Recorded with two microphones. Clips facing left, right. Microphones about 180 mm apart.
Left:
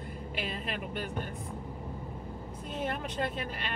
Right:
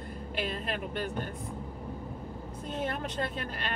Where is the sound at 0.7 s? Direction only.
5° left (ahead or behind).